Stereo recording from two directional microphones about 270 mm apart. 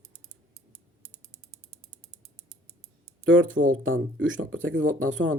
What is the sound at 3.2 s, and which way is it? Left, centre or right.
Speech, right.